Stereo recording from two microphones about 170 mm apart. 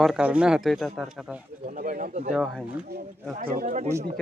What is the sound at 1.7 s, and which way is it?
Speech, 55° right (ahead or behind).